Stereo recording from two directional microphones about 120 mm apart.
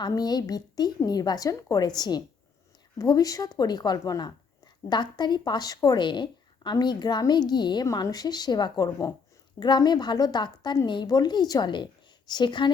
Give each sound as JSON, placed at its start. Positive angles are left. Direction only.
{"t": 0.0, "sound": "a woman's voice", "side_deg": 35}